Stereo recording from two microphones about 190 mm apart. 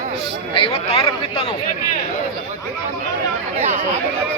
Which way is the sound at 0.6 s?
30° left (ahead or behind).